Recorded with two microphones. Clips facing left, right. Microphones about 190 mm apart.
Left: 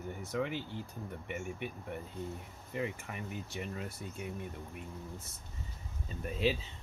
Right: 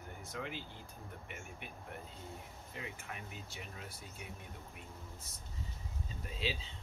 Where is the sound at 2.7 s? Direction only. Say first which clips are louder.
Left 10 dB; 60° left (ahead or behind).